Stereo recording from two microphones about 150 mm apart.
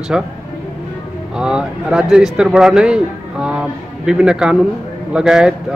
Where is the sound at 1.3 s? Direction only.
5° right (ahead or behind).